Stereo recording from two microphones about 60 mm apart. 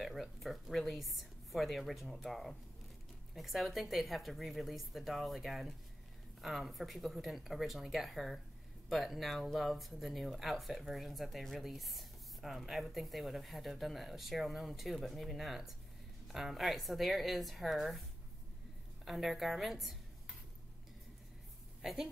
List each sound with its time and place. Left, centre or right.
0.0 s speech: centre
19.0 s a woman's voice: centre
21.8 s a woman's voice: centre